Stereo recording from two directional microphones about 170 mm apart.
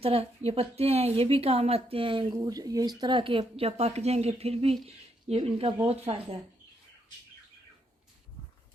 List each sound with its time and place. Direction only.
0.0 s a woman's voice: 35° right (ahead or behind)